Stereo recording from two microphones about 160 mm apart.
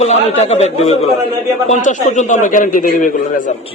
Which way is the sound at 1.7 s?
50° left (ahead or behind).